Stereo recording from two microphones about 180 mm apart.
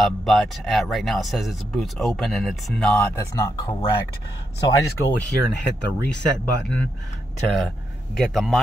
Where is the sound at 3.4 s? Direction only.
20° left (ahead or behind).